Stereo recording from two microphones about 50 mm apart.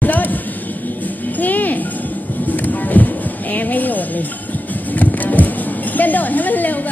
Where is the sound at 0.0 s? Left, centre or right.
Left.